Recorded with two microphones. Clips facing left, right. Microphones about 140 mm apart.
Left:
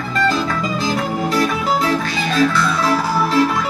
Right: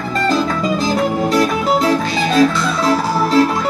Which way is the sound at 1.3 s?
35° right (ahead or behind).